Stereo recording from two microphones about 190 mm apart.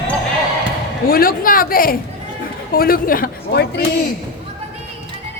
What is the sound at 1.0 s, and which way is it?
A woman's voice, 50° left (ahead or behind).